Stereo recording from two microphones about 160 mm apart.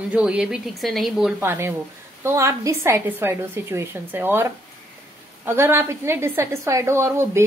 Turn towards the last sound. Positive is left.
turn(degrees=-15)  # may be behind; listen again after turning